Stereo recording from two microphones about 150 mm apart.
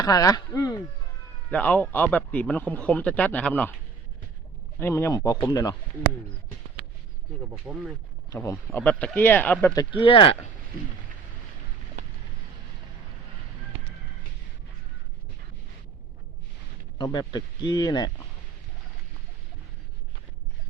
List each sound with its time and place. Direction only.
0.0 s speech: 25° left (ahead or behind)
1.5 s speech: 10° left (ahead or behind)
4.8 s speech: 15° left (ahead or behind)
7.5 s speech: 10° right (ahead or behind)
8.4 s speech: 10° left (ahead or behind)
10.0 s speech: 35° left (ahead or behind)
17.0 s speech: 25° left (ahead or behind)